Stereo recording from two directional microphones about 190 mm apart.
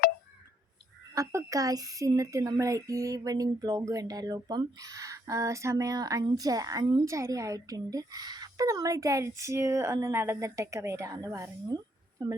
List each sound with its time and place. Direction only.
1.1 s a woman's voice: 15° right (ahead or behind)